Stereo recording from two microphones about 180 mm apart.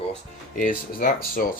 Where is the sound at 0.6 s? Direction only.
50° left (ahead or behind).